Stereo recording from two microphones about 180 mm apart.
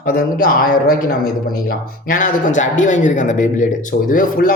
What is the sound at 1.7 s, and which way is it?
A man's voice, 45° left (ahead or behind).